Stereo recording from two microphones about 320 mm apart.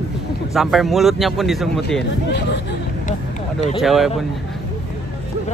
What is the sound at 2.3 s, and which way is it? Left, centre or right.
Speech, left.